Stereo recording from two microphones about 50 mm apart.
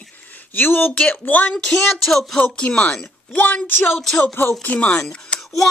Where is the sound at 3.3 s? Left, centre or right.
Left.